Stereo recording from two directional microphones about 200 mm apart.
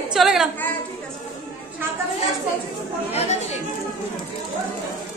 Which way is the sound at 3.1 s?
35° left (ahead or behind).